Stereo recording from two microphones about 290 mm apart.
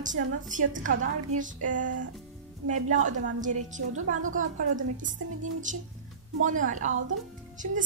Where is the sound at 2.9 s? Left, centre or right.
Right.